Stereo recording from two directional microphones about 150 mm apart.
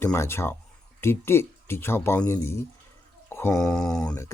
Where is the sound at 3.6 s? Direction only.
5° left (ahead or behind).